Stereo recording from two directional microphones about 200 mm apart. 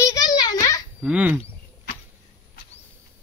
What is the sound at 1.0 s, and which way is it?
Speech, 5° right (ahead or behind).